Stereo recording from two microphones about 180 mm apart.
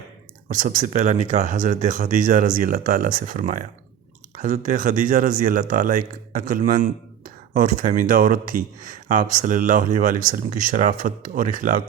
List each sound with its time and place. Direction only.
0.4 s speech: 45° right (ahead or behind)